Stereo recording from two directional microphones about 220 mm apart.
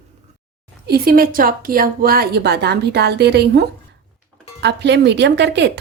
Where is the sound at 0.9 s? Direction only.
45° right (ahead or behind).